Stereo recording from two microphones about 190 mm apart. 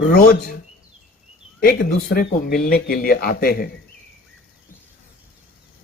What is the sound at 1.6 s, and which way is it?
Speech, 50° left (ahead or behind).